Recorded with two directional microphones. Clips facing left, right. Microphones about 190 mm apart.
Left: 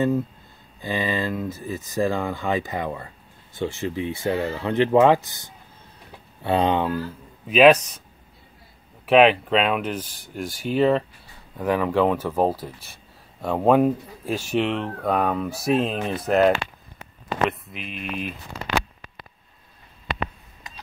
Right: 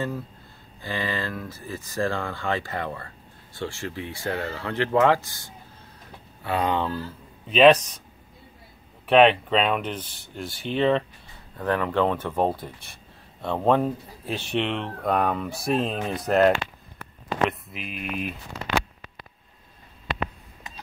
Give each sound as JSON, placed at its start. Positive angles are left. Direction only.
{"t": 0.7, "sound": "speech", "side_deg": 20}
{"t": 7.4, "sound": "speech", "side_deg": 5}
{"t": 9.0, "sound": "speech", "side_deg": 5}